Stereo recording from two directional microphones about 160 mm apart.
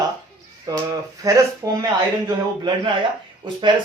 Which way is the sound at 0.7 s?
25° right (ahead or behind).